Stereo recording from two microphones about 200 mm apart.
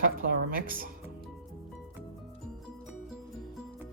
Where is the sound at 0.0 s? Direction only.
45° right (ahead or behind).